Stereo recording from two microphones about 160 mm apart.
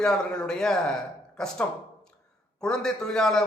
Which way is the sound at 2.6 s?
5° left (ahead or behind).